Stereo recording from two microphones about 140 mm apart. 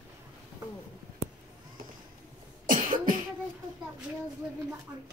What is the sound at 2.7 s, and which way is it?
Cough, 75° right (ahead or behind).